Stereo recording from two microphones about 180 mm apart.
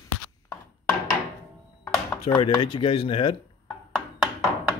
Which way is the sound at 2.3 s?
25° left (ahead or behind).